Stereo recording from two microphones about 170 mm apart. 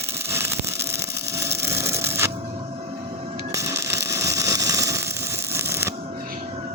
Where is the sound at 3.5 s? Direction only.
15° right (ahead or behind).